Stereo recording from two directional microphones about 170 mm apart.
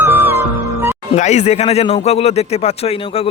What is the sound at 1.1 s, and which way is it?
Speech, 45° left (ahead or behind).